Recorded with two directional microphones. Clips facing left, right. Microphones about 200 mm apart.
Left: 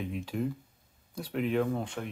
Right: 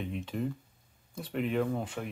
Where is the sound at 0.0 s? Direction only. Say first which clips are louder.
Left 1 dB; centre (ahead or behind).